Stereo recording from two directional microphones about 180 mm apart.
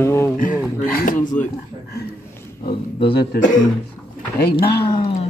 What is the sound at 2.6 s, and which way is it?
Speech, 25° left (ahead or behind).